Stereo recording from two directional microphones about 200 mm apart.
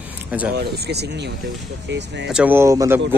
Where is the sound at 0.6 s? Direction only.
55° right (ahead or behind).